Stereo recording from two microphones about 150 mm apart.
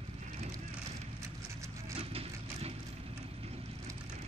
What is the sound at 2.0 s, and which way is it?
Vehicle, 40° right (ahead or behind).